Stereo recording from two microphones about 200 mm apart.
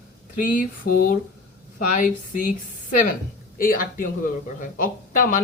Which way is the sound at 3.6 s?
45° left (ahead or behind).